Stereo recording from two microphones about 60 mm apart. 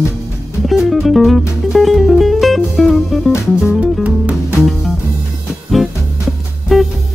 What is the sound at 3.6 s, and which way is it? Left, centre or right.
Music, centre.